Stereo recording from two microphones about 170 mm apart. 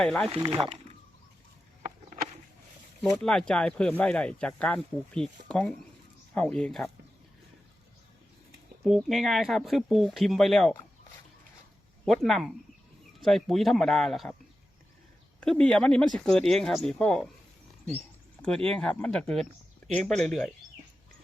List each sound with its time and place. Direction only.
0.0 s speech: 5° left (ahead or behind)
0.3 s speech: 30° right (ahead or behind)
3.0 s speech: centre (ahead or behind)
8.8 s speech: centre (ahead or behind)
12.0 s speech: centre (ahead or behind)
15.4 s speech: 5° left (ahead or behind)
18.4 s speech: 5° left (ahead or behind)